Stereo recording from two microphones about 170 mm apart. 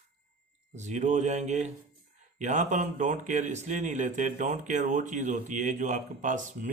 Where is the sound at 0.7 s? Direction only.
45° right (ahead or behind).